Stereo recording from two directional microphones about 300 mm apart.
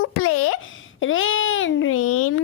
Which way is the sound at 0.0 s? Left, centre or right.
Left.